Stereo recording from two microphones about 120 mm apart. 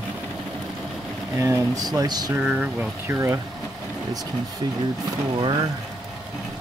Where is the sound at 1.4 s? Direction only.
30° right (ahead or behind).